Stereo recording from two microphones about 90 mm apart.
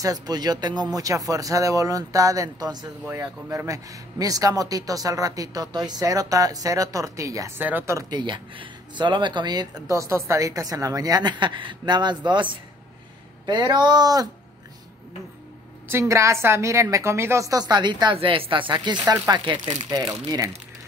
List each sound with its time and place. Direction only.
0.0 s speech: 45° right (ahead or behind)
3.2 s speech: 35° right (ahead or behind)
7.5 s speech: 20° right (ahead or behind)
7.8 s speech: 35° right (ahead or behind)
8.1 s speech: 60° right (ahead or behind)
9.8 s a woman's voice: 35° right (ahead or behind)
15.9 s speech: 30° right (ahead or behind); by 19.1 s 55° right (ahead or behind)
20.2 s speech: 40° right (ahead or behind)